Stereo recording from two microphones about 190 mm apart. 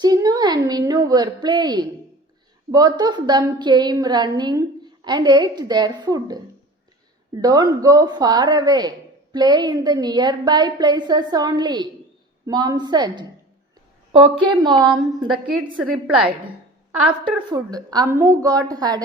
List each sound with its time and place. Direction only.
0.0 s a sound: 20° right (ahead or behind)
2.7 s a woman's voice: 20° right (ahead or behind)
7.4 s a woman's voice: 20° right (ahead or behind)
14.4 s a woman's voice: 25° right (ahead or behind)
15.8 s a woman's voice: 5° right (ahead or behind)
17.5 s a woman's voice: 20° right (ahead or behind)